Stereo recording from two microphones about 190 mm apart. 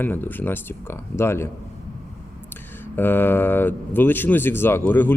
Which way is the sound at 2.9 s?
10° left (ahead or behind).